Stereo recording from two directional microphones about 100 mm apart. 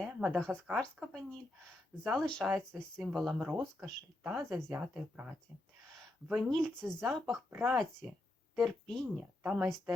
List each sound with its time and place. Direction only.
0.0 s speech: centre (ahead or behind)
2.4 s speech: 5° right (ahead or behind)
4.7 s speech: 15° right (ahead or behind)
6.3 s speech: centre (ahead or behind)
9.4 s a woman's voice: 10° right (ahead or behind)